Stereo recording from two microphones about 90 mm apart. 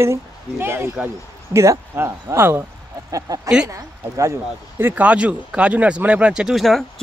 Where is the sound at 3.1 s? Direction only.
40° right (ahead or behind).